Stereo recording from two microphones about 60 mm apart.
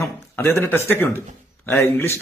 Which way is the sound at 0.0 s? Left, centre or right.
Left.